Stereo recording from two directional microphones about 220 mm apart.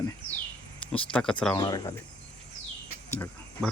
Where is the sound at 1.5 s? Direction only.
15° left (ahead or behind).